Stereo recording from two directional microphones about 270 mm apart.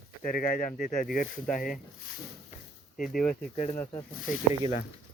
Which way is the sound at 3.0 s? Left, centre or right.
Left.